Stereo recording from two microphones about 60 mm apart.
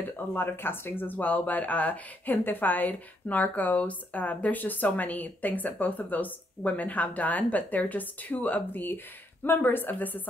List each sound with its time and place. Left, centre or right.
0.3 s speech: left